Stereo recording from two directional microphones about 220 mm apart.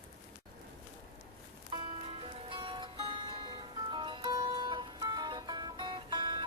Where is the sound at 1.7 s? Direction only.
25° right (ahead or behind).